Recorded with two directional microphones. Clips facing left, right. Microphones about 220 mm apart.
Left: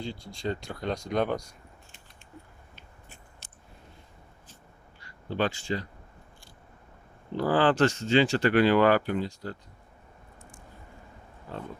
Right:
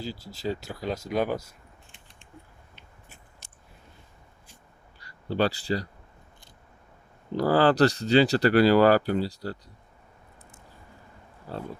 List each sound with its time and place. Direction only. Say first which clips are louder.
0.0 s speech: right 1 dB; 5° right (ahead or behind)
4.9 s speech: right 3 dB; 35° right (ahead or behind)
7.3 s speech: right 3 dB; 40° right (ahead or behind)
11.5 s speech: right 3 dB; 35° right (ahead or behind)